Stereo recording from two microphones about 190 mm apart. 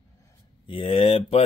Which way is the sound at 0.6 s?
25° left (ahead or behind).